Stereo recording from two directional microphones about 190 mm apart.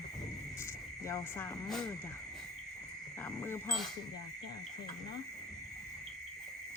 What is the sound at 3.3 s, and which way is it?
Speech, 10° left (ahead or behind).